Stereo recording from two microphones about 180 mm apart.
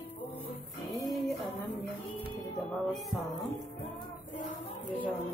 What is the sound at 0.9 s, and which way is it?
Music, centre (ahead or behind).